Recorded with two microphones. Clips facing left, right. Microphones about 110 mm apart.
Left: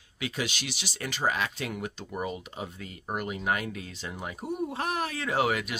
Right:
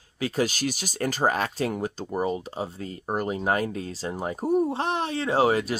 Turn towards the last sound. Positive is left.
turn(degrees=-30)  # may be behind; listen again after turning